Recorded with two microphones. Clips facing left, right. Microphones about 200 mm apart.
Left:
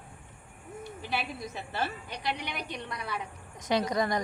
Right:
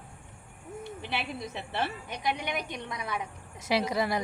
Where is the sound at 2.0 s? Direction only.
20° right (ahead or behind).